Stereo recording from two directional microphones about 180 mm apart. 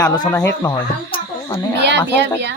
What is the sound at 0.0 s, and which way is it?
Speech, 20° left (ahead or behind).